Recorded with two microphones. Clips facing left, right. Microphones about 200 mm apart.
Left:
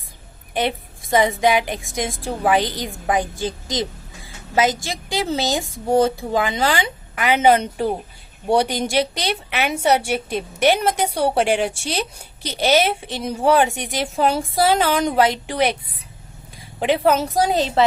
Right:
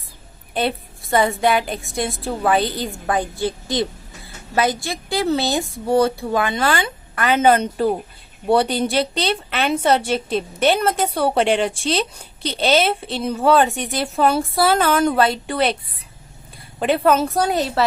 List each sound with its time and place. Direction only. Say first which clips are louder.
0.5 s a woman's voice: even; 15° left (ahead or behind)
16.8 s a woman's voice: right 1 dB; 15° left (ahead or behind)